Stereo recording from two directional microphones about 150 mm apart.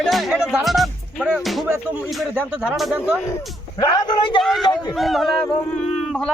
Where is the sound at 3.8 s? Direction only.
30° left (ahead or behind).